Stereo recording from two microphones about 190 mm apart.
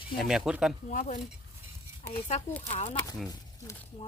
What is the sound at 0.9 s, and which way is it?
Speech, 40° left (ahead or behind).